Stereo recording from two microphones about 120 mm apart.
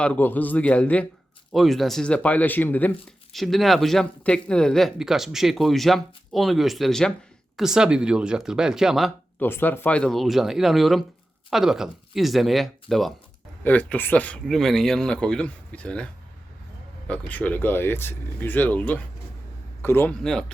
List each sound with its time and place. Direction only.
0.0 s speech: 15° left (ahead or behind)
1.5 s speech: centre (ahead or behind)
3.3 s speech: centre (ahead or behind)
9.4 s speech: 15° left (ahead or behind); by 13.1 s centre (ahead or behind)
13.7 s speech: 15° left (ahead or behind)
17.1 s speech: 10° left (ahead or behind)